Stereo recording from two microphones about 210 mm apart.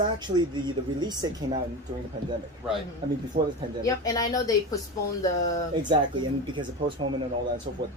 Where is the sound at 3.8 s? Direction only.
15° left (ahead or behind).